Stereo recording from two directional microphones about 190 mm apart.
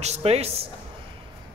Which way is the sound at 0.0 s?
35° right (ahead or behind).